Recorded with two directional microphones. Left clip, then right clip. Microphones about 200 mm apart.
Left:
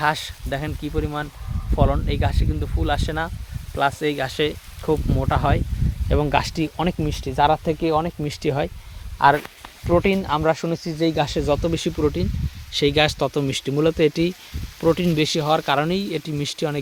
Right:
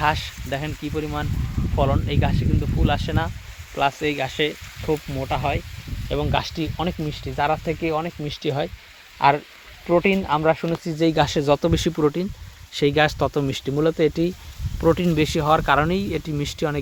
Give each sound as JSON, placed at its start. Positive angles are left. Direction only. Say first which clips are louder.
{"t": 0.0, "sound": "speech", "louder": "even", "side_deg": 5}
{"t": 5.2, "sound": "speech", "louder": "left 2 dB", "side_deg": 25}
{"t": 9.8, "sound": "speech", "louder": "even", "side_deg": -5}